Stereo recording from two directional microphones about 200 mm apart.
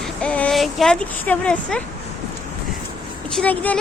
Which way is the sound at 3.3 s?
10° left (ahead or behind).